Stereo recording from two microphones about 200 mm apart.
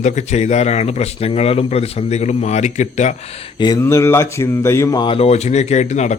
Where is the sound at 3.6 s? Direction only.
15° left (ahead or behind); by 6.2 s 35° left (ahead or behind).